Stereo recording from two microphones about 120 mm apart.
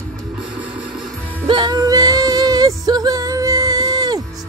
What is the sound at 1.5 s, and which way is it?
Music, 35° right (ahead or behind).